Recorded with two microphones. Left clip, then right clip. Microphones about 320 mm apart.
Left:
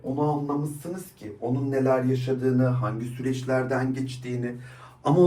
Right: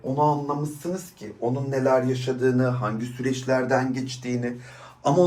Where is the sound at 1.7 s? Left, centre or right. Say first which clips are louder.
Right 2 dB; right.